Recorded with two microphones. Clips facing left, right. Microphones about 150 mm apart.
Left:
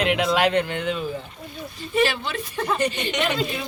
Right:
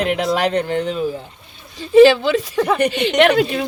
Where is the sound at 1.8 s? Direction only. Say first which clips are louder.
Right 13 dB; 90° right; by 3.6 s 65° right (ahead or behind).